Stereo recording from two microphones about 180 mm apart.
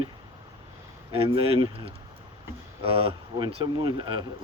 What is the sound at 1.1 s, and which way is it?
Speech, 30° right (ahead or behind).